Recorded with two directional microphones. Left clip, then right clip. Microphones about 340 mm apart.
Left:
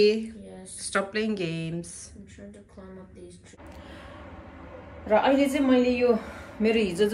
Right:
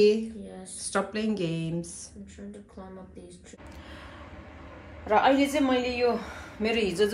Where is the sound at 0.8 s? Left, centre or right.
Centre.